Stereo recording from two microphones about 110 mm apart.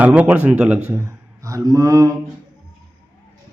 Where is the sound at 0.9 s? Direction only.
25° right (ahead or behind).